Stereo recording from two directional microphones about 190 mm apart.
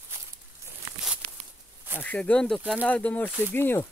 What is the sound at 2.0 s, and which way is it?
Speech, 10° left (ahead or behind).